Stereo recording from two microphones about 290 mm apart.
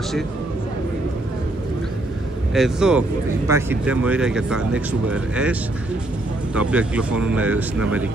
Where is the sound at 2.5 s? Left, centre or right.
Centre.